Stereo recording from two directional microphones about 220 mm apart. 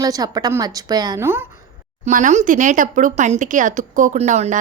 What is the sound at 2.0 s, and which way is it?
Speech, 35° right (ahead or behind).